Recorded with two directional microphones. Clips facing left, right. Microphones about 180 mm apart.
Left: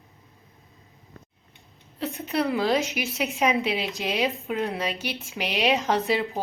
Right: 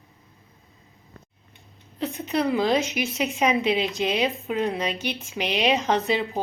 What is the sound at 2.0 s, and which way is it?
A woman's voice, centre (ahead or behind).